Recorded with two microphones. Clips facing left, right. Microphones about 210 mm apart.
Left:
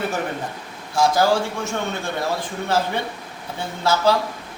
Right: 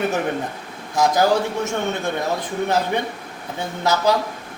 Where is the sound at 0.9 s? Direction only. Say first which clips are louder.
Right 1 dB; 20° right (ahead or behind).